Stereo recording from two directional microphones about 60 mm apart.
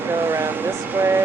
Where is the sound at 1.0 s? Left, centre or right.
Right.